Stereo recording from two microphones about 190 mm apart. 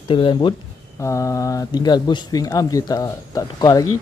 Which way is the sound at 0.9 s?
15° left (ahead or behind).